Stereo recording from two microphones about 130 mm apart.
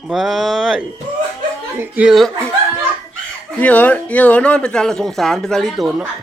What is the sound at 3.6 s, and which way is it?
Speech, 10° left (ahead or behind).